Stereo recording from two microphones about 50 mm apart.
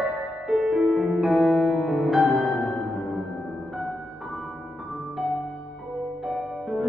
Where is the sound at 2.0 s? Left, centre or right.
Centre.